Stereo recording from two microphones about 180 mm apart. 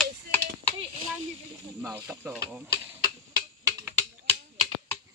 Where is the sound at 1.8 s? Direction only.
10° right (ahead or behind).